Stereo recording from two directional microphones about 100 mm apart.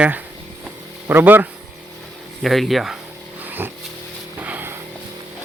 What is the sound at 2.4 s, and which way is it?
Speech, centre (ahead or behind).